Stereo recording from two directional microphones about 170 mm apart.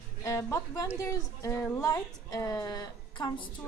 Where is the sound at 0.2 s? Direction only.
15° left (ahead or behind).